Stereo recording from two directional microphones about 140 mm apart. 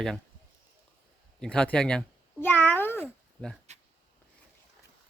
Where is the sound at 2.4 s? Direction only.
15° left (ahead or behind).